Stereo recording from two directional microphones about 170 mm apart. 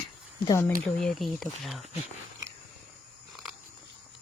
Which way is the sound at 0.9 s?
Centre (ahead or behind).